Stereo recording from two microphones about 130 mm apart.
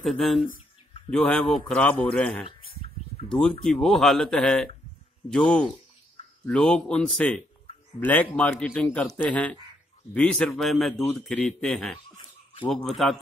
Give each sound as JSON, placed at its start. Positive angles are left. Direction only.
{"t": 0.0, "sound": "a man's voice", "side_deg": 0}
{"t": 2.4, "sound": "a sound", "side_deg": 50}
{"t": 3.3, "sound": "a man's voice", "side_deg": 5}